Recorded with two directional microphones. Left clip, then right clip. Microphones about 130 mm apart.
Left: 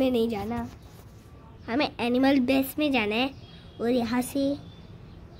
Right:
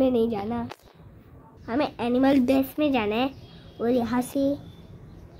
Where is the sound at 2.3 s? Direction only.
5° right (ahead or behind).